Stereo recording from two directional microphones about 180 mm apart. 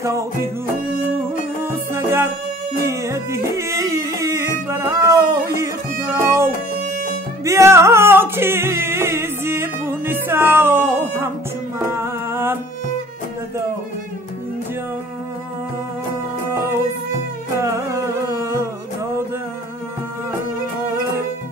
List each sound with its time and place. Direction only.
0.0 s music: 15° right (ahead or behind)
1.7 s music: 15° right (ahead or behind)
11.9 s a sound: 15° right (ahead or behind)
17.6 s music: 15° right (ahead or behind)